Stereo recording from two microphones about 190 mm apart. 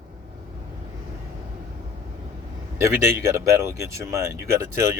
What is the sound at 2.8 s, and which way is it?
Speech, 15° right (ahead or behind).